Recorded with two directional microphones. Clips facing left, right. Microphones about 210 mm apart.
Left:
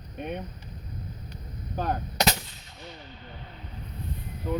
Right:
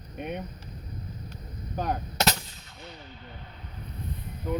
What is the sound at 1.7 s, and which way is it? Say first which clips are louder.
Gunshot: left 1 dB; 10° right (ahead or behind).